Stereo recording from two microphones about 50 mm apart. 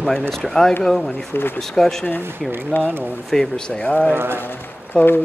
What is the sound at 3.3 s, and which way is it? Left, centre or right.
Speech, centre.